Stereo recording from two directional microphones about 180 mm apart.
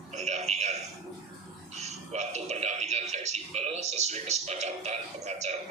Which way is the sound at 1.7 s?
40° right (ahead or behind).